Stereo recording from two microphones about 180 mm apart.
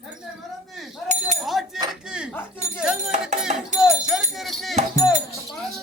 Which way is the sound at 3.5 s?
40° right (ahead or behind).